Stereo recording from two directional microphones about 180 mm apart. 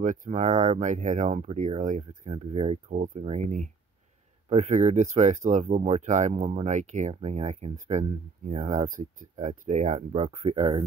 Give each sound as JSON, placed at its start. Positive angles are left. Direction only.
{"t": 0.0, "sound": "speech", "side_deg": -45}